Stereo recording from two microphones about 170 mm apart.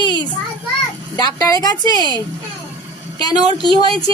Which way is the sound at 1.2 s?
20° left (ahead or behind).